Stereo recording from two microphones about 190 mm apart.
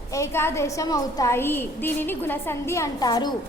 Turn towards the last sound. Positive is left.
turn(degrees=20)  # may be behind; listen again after turning